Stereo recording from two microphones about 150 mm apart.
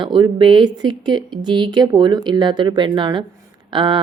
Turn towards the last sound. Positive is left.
turn(degrees=-35)  # may be behind; listen again after turning